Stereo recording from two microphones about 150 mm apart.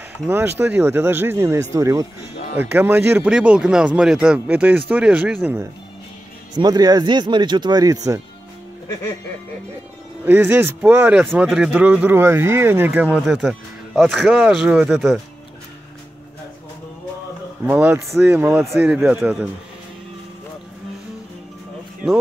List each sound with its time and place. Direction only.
0.3 s speech: 15° right (ahead or behind)
6.5 s speech: 25° right (ahead or behind)
10.2 s speech: 15° right (ahead or behind)
17.6 s speech: 10° right (ahead or behind)